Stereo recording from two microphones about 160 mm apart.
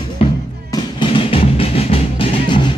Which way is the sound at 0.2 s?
35° left (ahead or behind).